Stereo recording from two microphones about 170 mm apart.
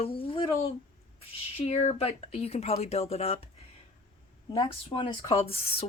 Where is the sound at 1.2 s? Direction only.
35° left (ahead or behind).